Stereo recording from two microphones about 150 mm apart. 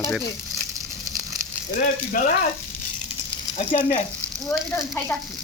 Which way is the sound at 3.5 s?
45° left (ahead or behind).